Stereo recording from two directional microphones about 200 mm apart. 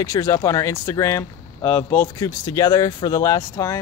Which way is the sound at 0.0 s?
15° left (ahead or behind).